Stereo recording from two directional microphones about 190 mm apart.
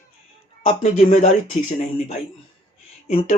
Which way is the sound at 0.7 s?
40° left (ahead or behind).